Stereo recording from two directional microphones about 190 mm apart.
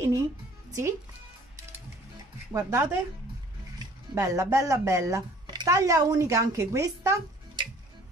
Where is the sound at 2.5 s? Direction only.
15° right (ahead or behind).